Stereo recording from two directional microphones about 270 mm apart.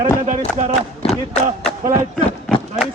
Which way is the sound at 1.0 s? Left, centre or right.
Left.